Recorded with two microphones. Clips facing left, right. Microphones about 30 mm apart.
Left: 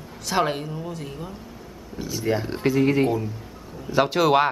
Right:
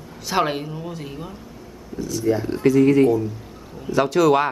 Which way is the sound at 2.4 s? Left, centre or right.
Centre.